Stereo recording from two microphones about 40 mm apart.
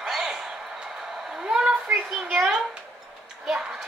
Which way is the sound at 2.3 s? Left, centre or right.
Centre.